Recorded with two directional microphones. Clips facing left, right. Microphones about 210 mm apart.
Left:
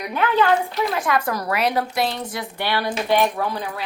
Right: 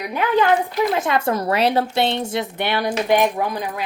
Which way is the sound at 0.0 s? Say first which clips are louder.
Right 1 dB; 10° right (ahead or behind).